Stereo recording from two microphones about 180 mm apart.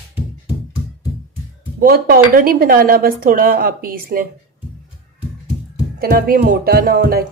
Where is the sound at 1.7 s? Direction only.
55° right (ahead or behind).